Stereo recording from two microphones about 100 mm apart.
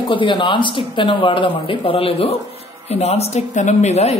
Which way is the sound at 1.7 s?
70° left (ahead or behind).